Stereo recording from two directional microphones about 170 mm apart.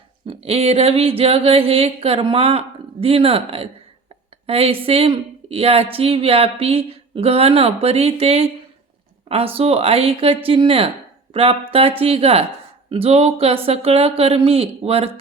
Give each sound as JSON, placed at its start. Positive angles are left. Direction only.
{"t": 0.4, "sound": "a woman's voice", "side_deg": -35}